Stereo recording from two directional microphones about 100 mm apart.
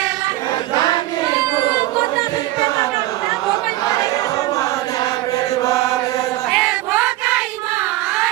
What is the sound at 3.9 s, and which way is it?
Choir, 35° left (ahead or behind).